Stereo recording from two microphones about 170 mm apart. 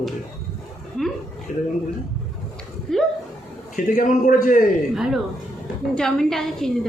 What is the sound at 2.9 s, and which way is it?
Speech, 5° left (ahead or behind).